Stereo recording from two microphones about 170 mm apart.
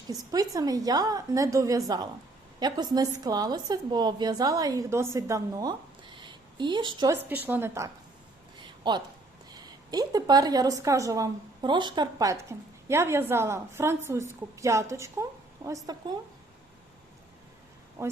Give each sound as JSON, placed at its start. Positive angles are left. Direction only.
{"t": 0.1, "sound": "a woman's voice", "side_deg": -20}
{"t": 7.3, "sound": "a woman's voice", "side_deg": -10}
{"t": 8.6, "sound": "a sound", "side_deg": -25}
{"t": 9.6, "sound": "a woman's voice", "side_deg": -20}
{"t": 18.0, "sound": "a woman's voice", "side_deg": -15}